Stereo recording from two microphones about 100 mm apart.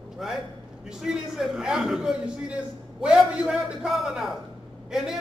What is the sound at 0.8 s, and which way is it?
A man's voice, 5° right (ahead or behind).